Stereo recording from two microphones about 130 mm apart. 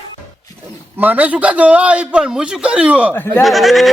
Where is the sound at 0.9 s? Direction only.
10° right (ahead or behind).